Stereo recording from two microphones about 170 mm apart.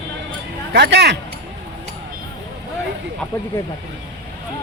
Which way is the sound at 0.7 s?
85° right.